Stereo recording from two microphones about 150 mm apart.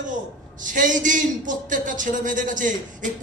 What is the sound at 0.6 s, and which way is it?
A man's voice, 60° right (ahead or behind).